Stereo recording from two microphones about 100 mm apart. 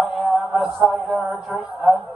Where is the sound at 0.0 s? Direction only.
Centre (ahead or behind).